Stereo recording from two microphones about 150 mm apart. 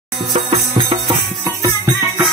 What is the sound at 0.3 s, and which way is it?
Music, 35° right (ahead or behind).